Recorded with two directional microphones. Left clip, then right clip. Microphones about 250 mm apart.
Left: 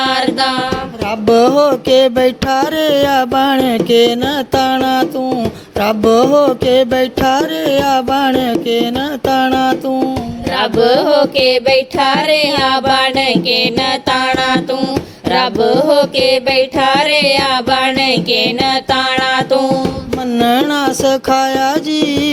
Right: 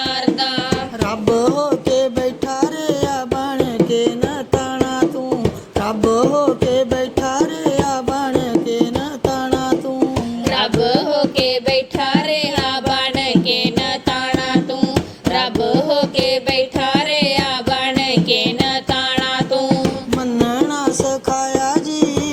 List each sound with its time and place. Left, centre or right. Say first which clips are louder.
0.0 s music: left 5 dB; left
1.3 s carnatic music: left 7 dB; left
3.0 s music: left 8 dB; left
3.3 s music: left 6 dB; left
4.6 s a sound: left 7 dB; left
5.8 s a sound: left 6 dB; left
6.7 s music: left 6 dB; left
7.3 s music: left 5 dB; left
11.0 s carnatic music: left 6 dB; left
11.4 s music: left 6 dB; left
21.0 s music: left 6 dB; left